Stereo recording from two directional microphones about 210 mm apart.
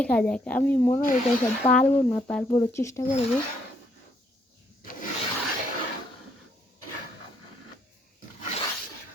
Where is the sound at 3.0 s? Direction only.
30° left (ahead or behind).